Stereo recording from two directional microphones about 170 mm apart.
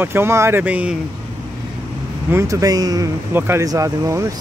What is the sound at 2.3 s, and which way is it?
Speech, 15° right (ahead or behind).